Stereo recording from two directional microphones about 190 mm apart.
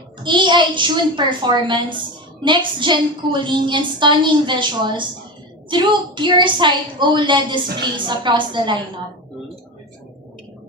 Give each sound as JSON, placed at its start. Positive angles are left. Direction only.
{"t": 0.2, "sound": "a woman's voice", "side_deg": -25}